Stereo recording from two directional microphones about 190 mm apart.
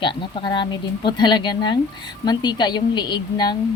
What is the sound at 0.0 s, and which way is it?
A woman's voice, 25° left (ahead or behind).